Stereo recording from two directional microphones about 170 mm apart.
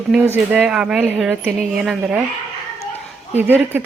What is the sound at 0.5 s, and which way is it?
Speech, 5° right (ahead or behind).